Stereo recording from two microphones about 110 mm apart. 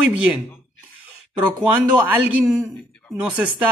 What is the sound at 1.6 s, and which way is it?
Speech, 15° right (ahead or behind).